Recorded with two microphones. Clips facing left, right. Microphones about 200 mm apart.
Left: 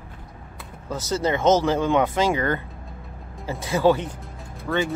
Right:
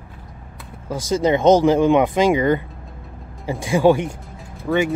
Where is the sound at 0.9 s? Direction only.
15° right (ahead or behind).